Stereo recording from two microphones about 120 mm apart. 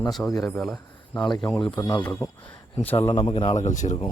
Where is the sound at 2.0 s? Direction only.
20° left (ahead or behind).